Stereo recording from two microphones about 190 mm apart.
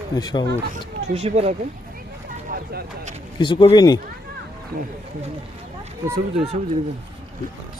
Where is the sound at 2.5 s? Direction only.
50° right (ahead or behind).